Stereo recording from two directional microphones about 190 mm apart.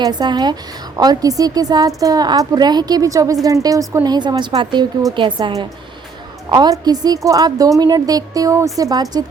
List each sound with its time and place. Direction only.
0.0 s a woman's voice: 20° right (ahead or behind)